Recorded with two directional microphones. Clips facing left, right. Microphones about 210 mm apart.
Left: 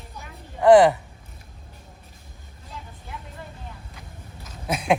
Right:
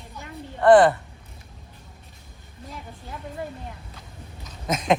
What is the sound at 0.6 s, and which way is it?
Speech, 10° left (ahead or behind).